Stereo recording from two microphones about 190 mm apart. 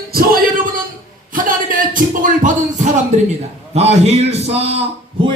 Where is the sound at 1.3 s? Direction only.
45° right (ahead or behind).